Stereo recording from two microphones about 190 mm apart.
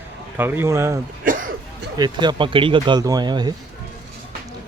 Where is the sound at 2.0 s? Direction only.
25° right (ahead or behind).